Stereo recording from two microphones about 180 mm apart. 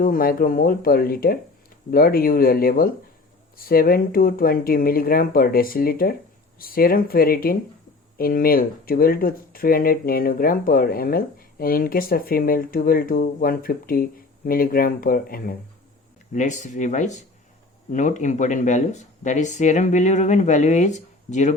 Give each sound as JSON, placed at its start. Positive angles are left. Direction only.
{"t": 0.0, "sound": "speech", "side_deg": 50}